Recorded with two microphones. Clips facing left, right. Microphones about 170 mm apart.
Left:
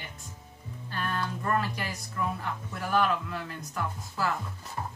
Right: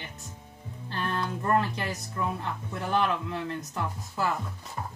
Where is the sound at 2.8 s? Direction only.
25° right (ahead or behind).